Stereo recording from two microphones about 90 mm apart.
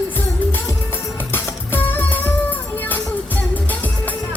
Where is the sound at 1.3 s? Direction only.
20° left (ahead or behind).